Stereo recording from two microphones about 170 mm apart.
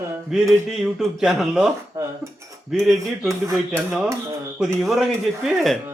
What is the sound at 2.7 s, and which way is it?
Speech, centre (ahead or behind).